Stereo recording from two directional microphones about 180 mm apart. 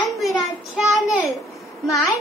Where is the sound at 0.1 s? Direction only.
Centre (ahead or behind).